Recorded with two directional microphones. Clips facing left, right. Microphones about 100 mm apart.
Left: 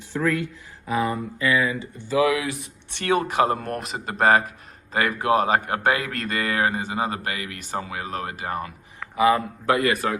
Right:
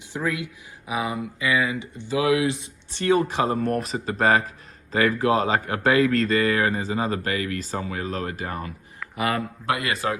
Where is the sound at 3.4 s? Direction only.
35° left (ahead or behind).